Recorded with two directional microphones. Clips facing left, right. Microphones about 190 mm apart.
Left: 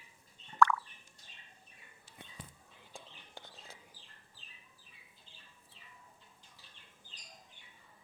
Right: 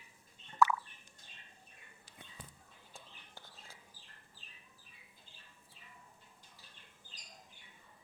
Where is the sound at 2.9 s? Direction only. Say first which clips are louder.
Left 5 dB; 20° left (ahead or behind).